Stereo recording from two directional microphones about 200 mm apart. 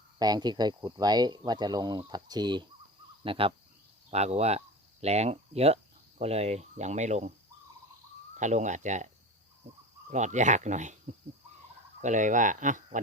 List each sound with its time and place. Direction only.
0.2 s speech: 20° right (ahead or behind); by 7.3 s 35° right (ahead or behind)
8.4 s speech: 35° right (ahead or behind)
10.1 s speech: 35° right (ahead or behind)
11.9 s speech: 40° right (ahead or behind)